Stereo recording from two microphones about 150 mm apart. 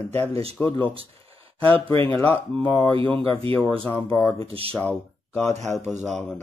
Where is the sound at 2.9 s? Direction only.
35° right (ahead or behind).